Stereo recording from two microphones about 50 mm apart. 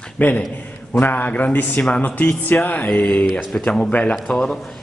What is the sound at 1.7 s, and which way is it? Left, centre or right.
A man's voice, left.